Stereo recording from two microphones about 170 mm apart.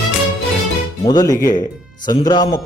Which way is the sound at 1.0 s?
20° left (ahead or behind).